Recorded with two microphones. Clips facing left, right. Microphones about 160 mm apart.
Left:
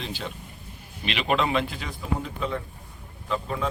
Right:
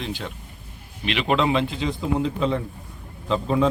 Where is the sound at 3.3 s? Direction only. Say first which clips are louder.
Right 7 dB; 25° right (ahead or behind).